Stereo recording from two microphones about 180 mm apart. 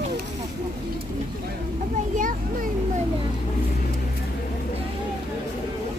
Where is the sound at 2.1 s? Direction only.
50° right (ahead or behind).